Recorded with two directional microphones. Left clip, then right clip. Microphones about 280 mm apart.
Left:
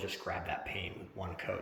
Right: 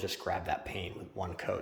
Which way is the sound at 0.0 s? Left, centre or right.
Centre.